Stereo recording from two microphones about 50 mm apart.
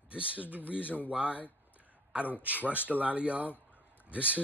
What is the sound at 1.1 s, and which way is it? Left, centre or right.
Speech, right.